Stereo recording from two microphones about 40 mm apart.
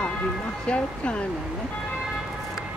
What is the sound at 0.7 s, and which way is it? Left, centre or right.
Speech, left.